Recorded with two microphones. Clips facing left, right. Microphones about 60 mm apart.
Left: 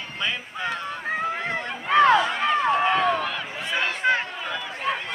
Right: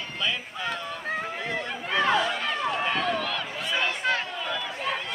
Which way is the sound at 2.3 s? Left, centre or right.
Left.